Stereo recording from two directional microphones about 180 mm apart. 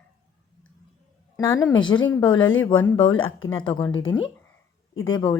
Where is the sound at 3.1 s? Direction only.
90° left.